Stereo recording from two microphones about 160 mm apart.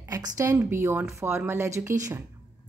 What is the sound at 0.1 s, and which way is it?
A woman's voice, 20° right (ahead or behind).